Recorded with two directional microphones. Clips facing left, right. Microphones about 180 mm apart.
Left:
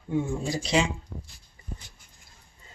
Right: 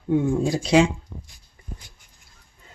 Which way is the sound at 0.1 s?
60° right (ahead or behind).